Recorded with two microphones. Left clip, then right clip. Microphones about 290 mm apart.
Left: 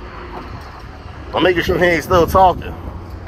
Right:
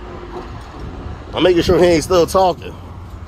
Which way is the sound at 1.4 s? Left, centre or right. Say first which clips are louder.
Right 2 dB; centre.